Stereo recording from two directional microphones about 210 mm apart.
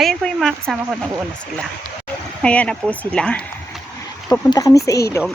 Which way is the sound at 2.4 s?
5° left (ahead or behind).